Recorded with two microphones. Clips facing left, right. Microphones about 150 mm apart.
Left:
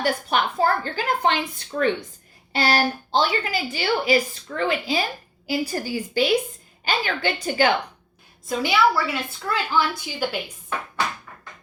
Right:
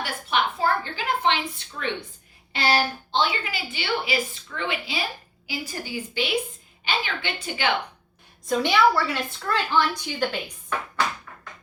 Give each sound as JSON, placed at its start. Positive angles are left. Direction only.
{"t": 0.0, "sound": "a sound", "side_deg": 40}
{"t": 2.5, "sound": "a woman's voice", "side_deg": 40}
{"t": 8.4, "sound": "a woman's voice", "side_deg": 5}